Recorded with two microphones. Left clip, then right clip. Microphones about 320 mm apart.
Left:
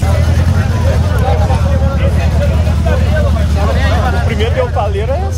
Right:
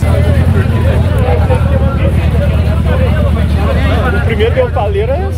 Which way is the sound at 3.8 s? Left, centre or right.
Left.